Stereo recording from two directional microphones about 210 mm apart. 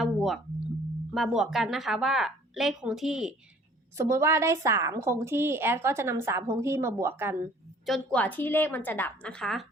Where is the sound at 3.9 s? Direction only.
15° right (ahead or behind).